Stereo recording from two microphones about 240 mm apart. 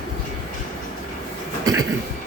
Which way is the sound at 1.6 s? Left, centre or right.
Centre.